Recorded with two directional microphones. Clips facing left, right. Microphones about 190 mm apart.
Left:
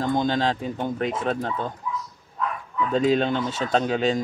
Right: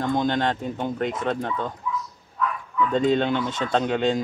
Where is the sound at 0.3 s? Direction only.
5° left (ahead or behind).